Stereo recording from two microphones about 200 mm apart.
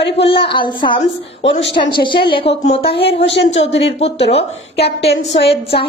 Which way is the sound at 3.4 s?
65° left (ahead or behind).